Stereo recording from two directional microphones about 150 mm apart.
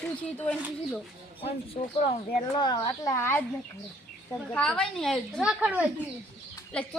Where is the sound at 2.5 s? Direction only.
30° left (ahead or behind).